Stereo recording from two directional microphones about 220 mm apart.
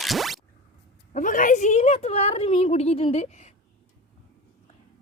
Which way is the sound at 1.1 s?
35° left (ahead or behind).